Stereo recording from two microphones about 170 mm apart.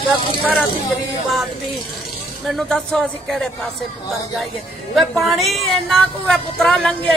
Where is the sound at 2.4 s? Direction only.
Centre (ahead or behind).